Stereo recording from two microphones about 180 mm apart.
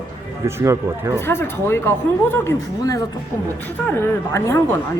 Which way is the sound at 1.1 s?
15° left (ahead or behind).